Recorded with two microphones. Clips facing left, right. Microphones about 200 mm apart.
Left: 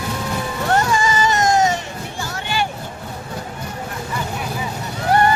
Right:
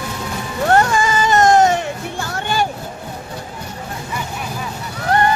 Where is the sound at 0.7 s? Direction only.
55° right (ahead or behind).